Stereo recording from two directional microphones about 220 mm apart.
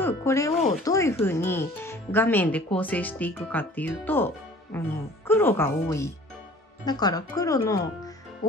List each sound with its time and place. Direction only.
0.0 s speech: 15° left (ahead or behind)